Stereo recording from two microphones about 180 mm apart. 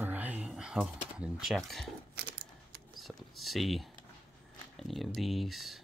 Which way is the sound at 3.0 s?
Centre (ahead or behind).